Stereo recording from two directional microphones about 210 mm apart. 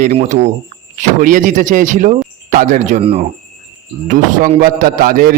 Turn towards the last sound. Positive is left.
turn(degrees=-45)  # may be behind; listen again after turning